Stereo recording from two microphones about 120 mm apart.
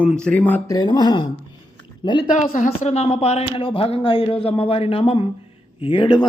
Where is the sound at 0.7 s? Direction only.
40° left (ahead or behind).